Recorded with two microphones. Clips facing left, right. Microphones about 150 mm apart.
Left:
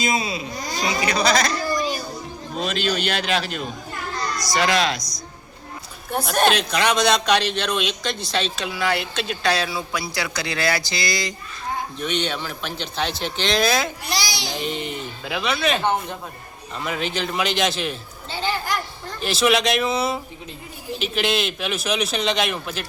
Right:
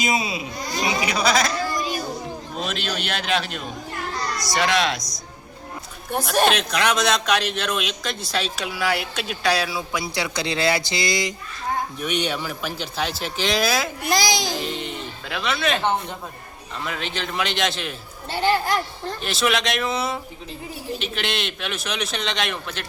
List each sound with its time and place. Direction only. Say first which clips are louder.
0.0 s speech: even; 10° right (ahead or behind)
1.0 s a sound: left 2 dB; 5° right (ahead or behind)
2.6 s a man's voice: left 5 dB; centre (ahead or behind)
6.2 s a man's voice: even; centre (ahead or behind)
10.2 s speech: right 3 dB; 25° right (ahead or behind); by 13.9 s 5° right (ahead or behind)
14.0 s a child's voice: right 6 dB; 50° right (ahead or behind)
14.6 s a man's voice: left 2 dB; centre (ahead or behind)
19.2 s a man's voice: left 4 dB; centre (ahead or behind)